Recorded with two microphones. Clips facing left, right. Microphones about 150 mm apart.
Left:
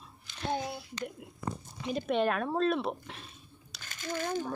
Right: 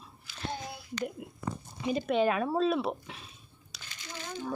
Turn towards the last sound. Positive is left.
turn(degrees=50)  # may be behind; listen again after turning